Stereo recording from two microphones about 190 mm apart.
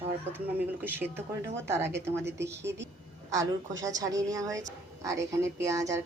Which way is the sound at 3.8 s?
20° right (ahead or behind).